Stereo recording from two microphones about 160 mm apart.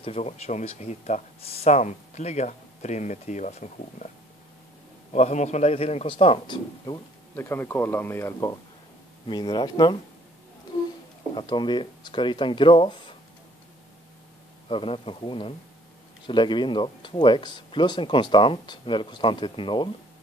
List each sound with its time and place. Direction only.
0.0 s speech: 40° left (ahead or behind)
5.1 s speech: 45° left (ahead or behind); by 7.0 s 30° left (ahead or behind)
7.3 s speech: 15° left (ahead or behind)
11.3 s speech: 30° left (ahead or behind)
14.7 s speech: 35° left (ahead or behind)